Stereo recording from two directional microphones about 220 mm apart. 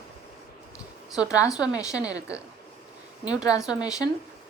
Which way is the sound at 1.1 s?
5° right (ahead or behind).